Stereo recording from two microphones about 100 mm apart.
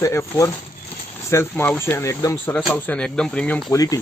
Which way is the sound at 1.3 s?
25° left (ahead or behind).